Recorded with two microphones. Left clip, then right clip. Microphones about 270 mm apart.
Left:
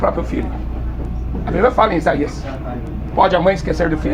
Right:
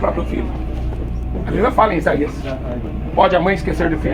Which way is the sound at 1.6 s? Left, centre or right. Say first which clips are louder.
Left 1 dB; left.